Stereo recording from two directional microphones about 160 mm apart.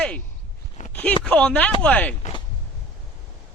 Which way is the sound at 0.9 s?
10° left (ahead or behind).